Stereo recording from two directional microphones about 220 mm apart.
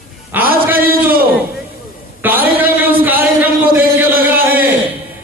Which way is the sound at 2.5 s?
10° right (ahead or behind).